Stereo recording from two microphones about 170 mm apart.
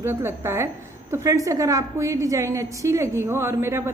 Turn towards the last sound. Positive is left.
turn(degrees=-15)  # may be behind; listen again after turning